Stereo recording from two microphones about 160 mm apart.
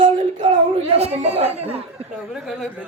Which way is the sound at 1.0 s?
40° right (ahead or behind).